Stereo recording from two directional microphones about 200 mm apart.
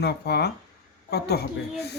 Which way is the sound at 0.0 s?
55° left (ahead or behind).